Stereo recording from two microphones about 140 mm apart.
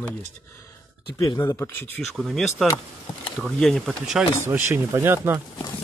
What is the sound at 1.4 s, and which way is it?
Speech, 15° left (ahead or behind).